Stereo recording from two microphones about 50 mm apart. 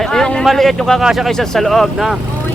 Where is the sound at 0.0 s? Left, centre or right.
Centre.